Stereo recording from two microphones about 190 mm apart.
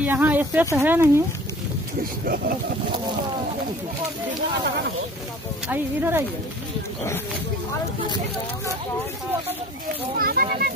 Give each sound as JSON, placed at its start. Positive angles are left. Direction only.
{"t": 0.0, "sound": "speech", "side_deg": -10}
{"t": 2.2, "sound": "a child's voice", "side_deg": -50}
{"t": 5.7, "sound": "speech", "side_deg": -10}
{"t": 10.1, "sound": "a child's voice", "side_deg": -50}